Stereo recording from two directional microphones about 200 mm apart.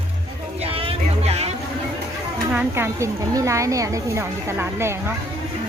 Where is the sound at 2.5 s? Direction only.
10° right (ahead or behind).